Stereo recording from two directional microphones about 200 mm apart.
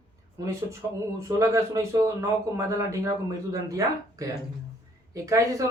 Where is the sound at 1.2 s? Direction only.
15° right (ahead or behind).